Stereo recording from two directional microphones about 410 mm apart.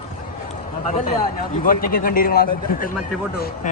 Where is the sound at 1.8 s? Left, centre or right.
Left.